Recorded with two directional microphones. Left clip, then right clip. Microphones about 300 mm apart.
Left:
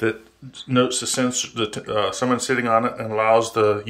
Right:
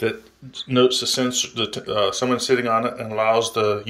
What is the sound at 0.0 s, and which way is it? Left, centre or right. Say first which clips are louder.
Speech: left 1 dB; centre.